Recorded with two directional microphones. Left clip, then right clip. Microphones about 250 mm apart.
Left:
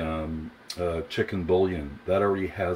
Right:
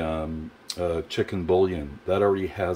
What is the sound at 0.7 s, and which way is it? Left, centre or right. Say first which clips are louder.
Speech: right 2 dB; centre.